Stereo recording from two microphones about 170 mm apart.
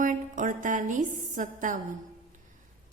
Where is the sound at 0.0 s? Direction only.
50° right (ahead or behind).